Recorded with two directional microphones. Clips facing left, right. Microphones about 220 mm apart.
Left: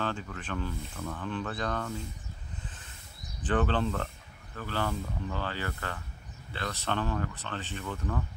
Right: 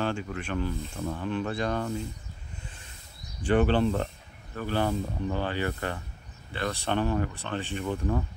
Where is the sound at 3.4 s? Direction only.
10° right (ahead or behind).